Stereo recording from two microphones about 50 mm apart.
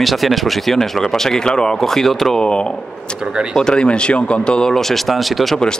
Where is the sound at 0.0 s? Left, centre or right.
Centre.